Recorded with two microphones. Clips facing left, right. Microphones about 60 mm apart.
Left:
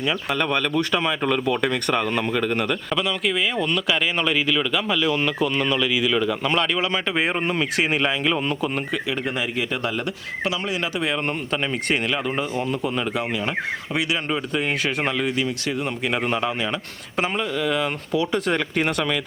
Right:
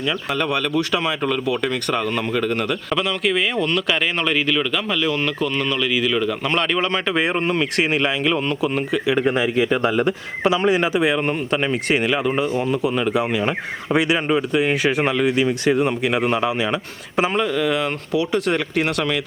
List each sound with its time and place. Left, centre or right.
0.0 s speech: centre
2.6 s speech: centre
9.2 s a man's voice: right; by 13.2 s centre
14.3 s a man's voice: centre
16.0 s speech: centre
17.3 s speech: centre